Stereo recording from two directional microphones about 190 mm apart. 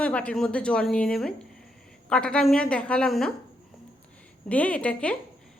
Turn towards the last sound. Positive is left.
turn(degrees=5)  # may be behind; listen again after turning